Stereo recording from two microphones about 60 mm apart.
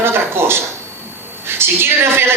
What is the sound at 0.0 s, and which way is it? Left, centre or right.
A woman's voice, right.